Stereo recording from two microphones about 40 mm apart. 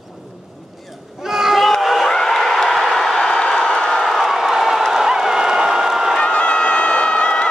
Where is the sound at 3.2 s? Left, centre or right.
Left.